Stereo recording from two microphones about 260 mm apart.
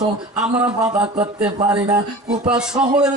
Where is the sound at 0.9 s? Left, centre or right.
Right.